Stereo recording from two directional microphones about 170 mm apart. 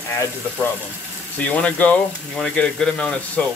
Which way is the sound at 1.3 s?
5° left (ahead or behind).